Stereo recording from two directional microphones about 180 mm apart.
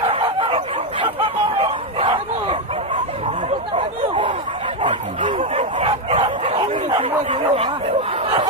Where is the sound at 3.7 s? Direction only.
30° right (ahead or behind).